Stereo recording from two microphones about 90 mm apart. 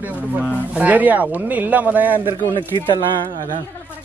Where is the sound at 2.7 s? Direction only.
50° left (ahead or behind).